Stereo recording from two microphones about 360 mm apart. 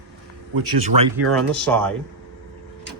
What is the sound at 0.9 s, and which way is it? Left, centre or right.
Speech, right.